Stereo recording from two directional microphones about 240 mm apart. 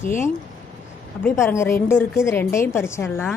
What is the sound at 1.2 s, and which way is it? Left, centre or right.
A woman's voice, centre.